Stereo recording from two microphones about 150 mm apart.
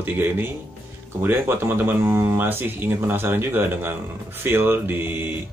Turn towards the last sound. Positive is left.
turn(degrees=-15)  # may be behind; listen again after turning